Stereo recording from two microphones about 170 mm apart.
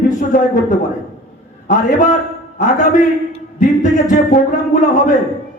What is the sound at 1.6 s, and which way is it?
Speech, 45° left (ahead or behind).